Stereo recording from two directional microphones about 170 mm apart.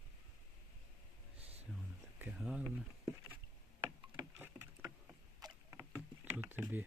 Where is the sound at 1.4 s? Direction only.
35° right (ahead or behind).